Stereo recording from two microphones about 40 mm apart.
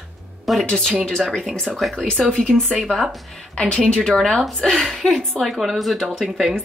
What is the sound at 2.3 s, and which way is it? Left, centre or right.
Speech, centre.